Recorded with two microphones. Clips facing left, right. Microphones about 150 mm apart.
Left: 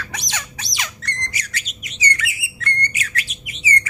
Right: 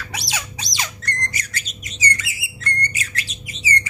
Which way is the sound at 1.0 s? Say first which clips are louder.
Right 3 dB; 50° right (ahead or behind).